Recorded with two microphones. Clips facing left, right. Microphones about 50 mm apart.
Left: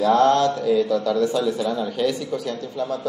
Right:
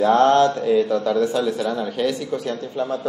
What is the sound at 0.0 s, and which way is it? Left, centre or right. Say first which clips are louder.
A man's voice: right 2 dB; right.